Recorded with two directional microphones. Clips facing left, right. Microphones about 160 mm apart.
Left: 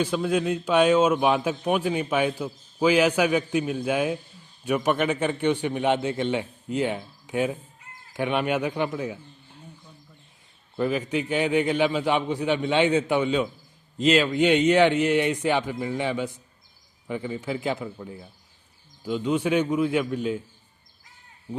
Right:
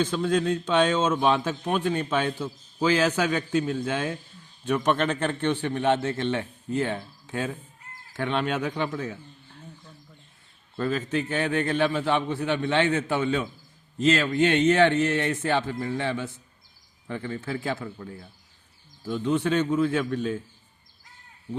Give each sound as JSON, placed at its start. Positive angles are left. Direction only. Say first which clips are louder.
{"t": 0.0, "sound": "a man's voice", "louder": "even", "side_deg": 10}
{"t": 10.8, "sound": "a man's voice", "louder": "left 2 dB", "side_deg": 15}